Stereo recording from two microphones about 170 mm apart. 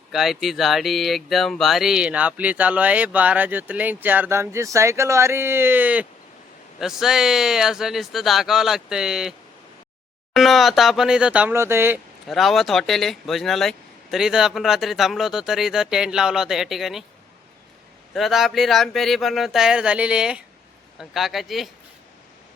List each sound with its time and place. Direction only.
0.1 s speech: centre (ahead or behind)
10.3 s speech: centre (ahead or behind)
12.3 s speech: centre (ahead or behind)
18.1 s speech: centre (ahead or behind)